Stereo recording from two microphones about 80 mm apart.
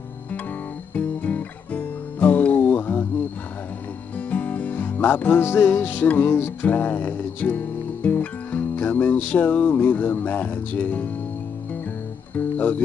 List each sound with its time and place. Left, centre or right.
0.9 s music: centre
4.3 s music: left
12.4 s speech: left